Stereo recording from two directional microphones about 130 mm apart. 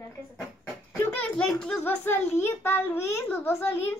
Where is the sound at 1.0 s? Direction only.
15° left (ahead or behind).